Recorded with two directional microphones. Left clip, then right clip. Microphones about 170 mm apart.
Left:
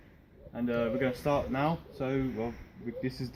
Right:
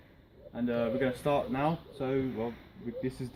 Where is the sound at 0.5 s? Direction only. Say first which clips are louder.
Even; 5° left (ahead or behind).